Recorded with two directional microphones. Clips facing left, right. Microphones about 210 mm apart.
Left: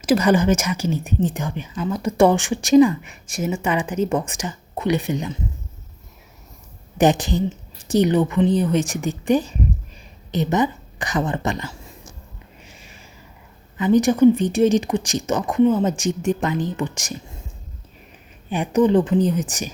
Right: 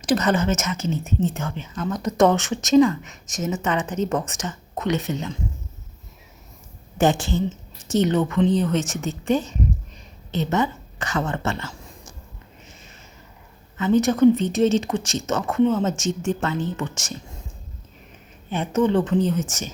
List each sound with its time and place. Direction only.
0.0 s speech: 10° left (ahead or behind)
7.0 s speech: 20° left (ahead or behind)
13.7 s speech: 15° left (ahead or behind)
18.5 s speech: 15° left (ahead or behind)